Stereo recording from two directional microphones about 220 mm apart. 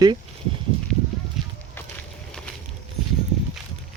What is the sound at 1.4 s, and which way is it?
Walk, centre (ahead or behind).